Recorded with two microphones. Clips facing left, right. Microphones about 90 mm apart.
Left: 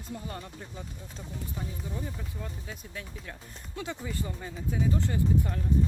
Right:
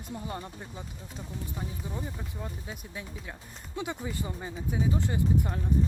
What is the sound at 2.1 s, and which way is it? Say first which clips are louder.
Speech: right 1 dB; 20° right (ahead or behind).